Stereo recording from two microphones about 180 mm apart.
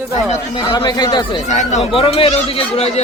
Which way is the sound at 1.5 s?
40° left (ahead or behind).